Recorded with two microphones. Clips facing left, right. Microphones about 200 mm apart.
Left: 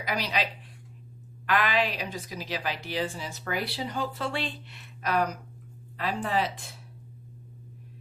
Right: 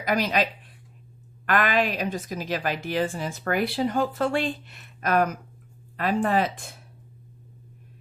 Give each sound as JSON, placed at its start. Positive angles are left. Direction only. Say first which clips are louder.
{"t": 0.0, "sound": "a woman's voice", "louder": "right 6 dB", "side_deg": -50}
{"t": 1.5, "sound": "a woman's voice", "louder": "right 3 dB", "side_deg": -50}